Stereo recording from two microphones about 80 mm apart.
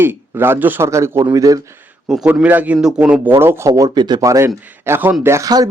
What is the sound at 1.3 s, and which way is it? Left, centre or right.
Speech, right.